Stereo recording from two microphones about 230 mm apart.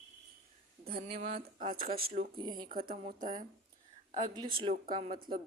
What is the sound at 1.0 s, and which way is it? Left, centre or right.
Speech, right.